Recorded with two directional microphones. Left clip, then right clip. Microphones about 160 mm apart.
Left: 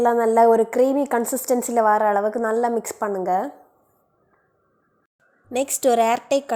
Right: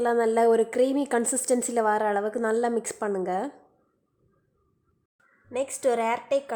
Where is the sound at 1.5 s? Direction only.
20° right (ahead or behind).